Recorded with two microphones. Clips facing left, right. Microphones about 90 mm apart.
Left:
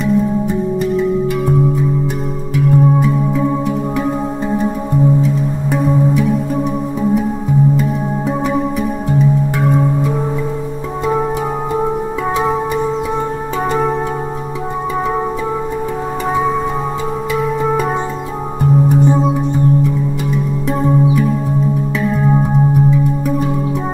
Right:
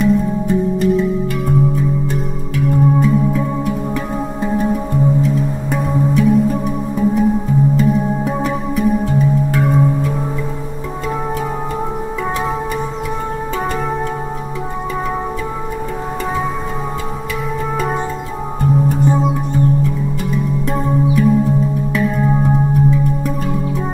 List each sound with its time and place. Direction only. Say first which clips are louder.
0.0 s music: even; centre (ahead or behind)
2.5 s music: left 2 dB; 5° left (ahead or behind)
8.4 s music: left 2 dB; centre (ahead or behind)
9.6 s singing bowl: right 1 dB; centre (ahead or behind)
18.6 s music: left 3 dB; 15° left (ahead or behind)
20.8 s music: left 1 dB; centre (ahead or behind)